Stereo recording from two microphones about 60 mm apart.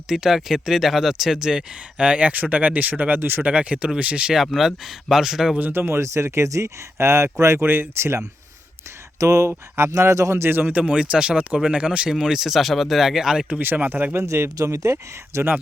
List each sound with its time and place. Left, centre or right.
0.1 s speech: centre; by 3.4 s right
3.4 s speech: right
4.4 s speech: centre
5.5 s speech: right
5.8 s speech: right
9.1 s speech: right
9.5 s speech: right
10.0 s speech: right
10.7 s speech: right; by 13.5 s centre
13.5 s speech: right
14.3 s speech: right
14.6 s speech: right
15.3 s speech: right